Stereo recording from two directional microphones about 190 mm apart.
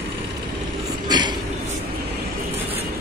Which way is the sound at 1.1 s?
25° right (ahead or behind).